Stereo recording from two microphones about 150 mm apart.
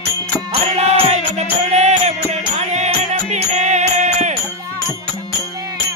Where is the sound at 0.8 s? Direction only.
45° right (ahead or behind).